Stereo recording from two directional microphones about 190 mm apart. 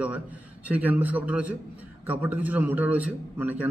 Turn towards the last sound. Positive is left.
turn(degrees=-10)  # may be behind; listen again after turning